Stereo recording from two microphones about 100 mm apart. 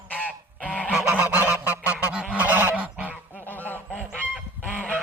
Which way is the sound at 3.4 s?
15° left (ahead or behind).